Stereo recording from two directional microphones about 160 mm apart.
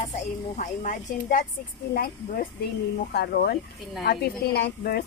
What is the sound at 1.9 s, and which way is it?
Speech, 70° left (ahead or behind).